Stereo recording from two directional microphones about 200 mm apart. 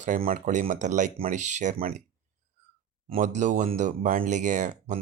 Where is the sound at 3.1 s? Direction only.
35° right (ahead or behind).